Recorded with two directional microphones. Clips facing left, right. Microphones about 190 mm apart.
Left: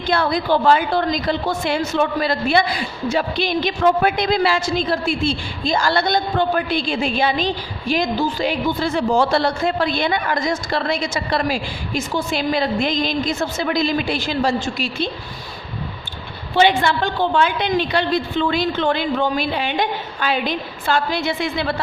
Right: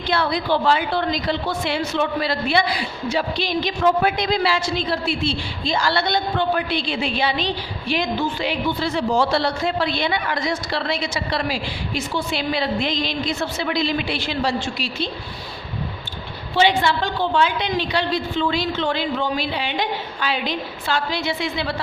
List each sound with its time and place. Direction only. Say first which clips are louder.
0.1 s a woman's voice: left 3 dB; 45° left (ahead or behind)
16.6 s a woman's voice: left 2 dB; 55° left (ahead or behind)